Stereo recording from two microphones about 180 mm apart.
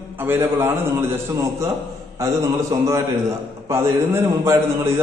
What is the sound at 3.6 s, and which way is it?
A man's voice, 15° right (ahead or behind).